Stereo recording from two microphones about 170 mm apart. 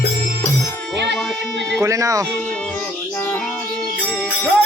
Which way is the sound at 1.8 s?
20° right (ahead or behind).